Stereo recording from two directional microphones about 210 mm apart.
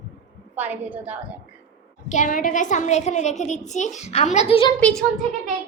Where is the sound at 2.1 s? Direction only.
40° left (ahead or behind).